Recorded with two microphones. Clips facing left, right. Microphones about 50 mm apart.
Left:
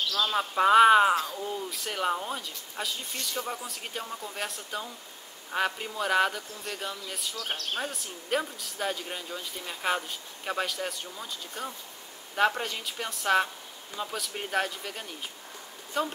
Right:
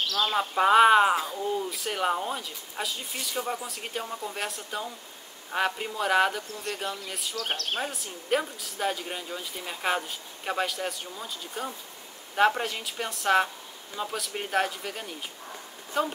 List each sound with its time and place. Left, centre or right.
0.3 s speech: centre
7.3 s speech: right
7.8 s speech: centre